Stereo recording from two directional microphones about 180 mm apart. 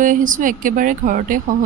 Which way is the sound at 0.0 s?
45° right (ahead or behind).